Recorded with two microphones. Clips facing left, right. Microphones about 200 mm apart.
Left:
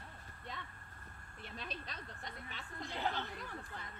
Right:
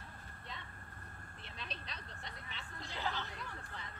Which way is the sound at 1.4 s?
50° left (ahead or behind).